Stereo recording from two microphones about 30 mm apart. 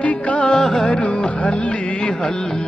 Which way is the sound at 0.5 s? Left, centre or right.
Centre.